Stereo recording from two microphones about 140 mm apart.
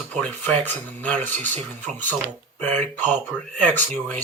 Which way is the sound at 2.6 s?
10° left (ahead or behind).